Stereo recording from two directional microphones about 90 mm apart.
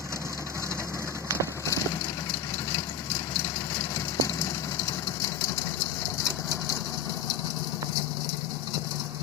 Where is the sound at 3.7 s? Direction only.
35° left (ahead or behind).